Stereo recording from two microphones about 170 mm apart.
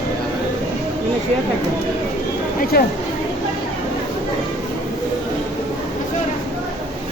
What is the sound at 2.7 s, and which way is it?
Speech, 65° left (ahead or behind).